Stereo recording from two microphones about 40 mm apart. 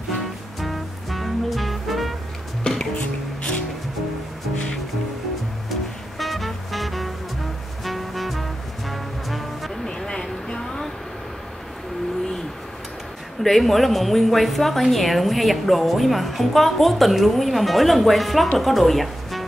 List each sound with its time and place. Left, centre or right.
0.6 s music: centre
2.6 s music: centre
5.7 s music: centre
9.8 s vehicle: centre
13.4 s a woman's voice: centre